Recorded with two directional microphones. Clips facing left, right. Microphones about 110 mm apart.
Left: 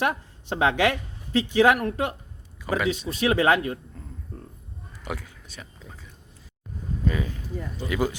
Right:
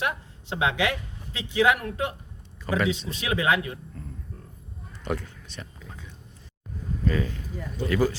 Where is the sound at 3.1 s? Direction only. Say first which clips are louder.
Left 8 dB; 40° left (ahead or behind).